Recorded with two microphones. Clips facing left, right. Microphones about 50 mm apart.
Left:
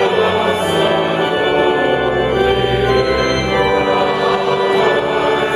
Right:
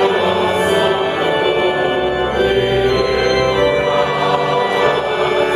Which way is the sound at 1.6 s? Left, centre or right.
Centre.